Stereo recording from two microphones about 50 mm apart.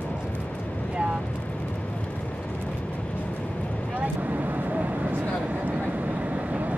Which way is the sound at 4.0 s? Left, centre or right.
Right.